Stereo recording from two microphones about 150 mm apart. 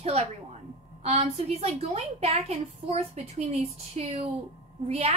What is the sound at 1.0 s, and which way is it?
A woman's voice, 45° right (ahead or behind).